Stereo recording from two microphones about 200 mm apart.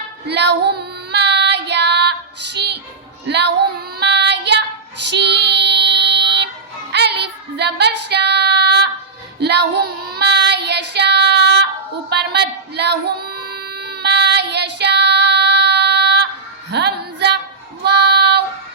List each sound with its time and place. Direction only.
0.3 s child singing: 55° right (ahead or behind)
6.9 s female singing: 55° right (ahead or behind)
9.4 s child singing: 55° right (ahead or behind)
16.7 s a sound: 55° right (ahead or behind)
17.8 s child singing: 55° right (ahead or behind)